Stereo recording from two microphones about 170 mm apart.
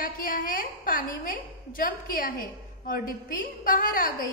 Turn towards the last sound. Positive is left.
turn(degrees=55)  # may be behind; listen again after turning